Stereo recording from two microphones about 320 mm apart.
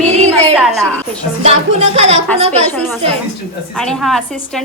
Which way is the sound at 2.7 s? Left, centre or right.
Centre.